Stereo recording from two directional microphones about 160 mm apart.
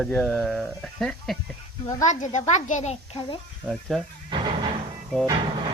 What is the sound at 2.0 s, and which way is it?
A child's voice, 50° left (ahead or behind).